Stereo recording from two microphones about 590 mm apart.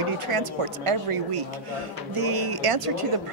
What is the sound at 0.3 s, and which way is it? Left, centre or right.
A woman's voice, right.